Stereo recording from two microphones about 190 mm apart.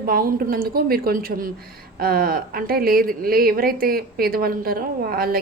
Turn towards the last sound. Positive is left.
turn(degrees=-50)  # may be behind; listen again after turning